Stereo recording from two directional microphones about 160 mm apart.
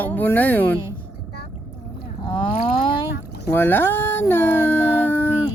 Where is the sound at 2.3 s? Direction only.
30° left (ahead or behind).